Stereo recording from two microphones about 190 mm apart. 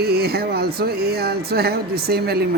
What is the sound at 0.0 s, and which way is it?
Speech, 55° right (ahead or behind).